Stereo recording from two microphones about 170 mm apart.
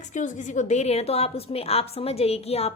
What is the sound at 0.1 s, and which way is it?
A woman's voice, 45° left (ahead or behind).